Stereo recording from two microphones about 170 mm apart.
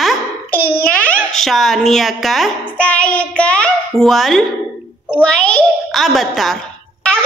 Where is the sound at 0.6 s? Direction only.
60° left (ahead or behind).